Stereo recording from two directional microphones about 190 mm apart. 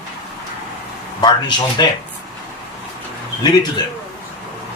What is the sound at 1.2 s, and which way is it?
Speech, 20° left (ahead or behind).